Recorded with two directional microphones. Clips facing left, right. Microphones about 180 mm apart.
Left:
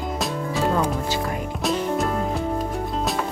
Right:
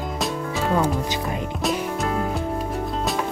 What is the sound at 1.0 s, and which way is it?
Music, 20° right (ahead or behind).